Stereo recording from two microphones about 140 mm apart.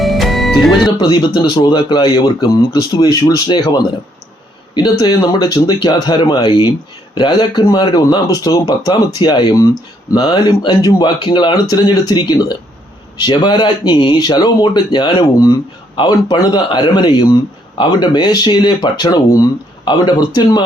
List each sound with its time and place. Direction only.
0.0 s music: centre (ahead or behind)
0.9 s speech: 35° left (ahead or behind)